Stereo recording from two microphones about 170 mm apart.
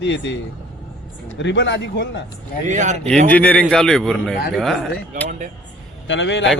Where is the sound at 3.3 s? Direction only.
10° left (ahead or behind).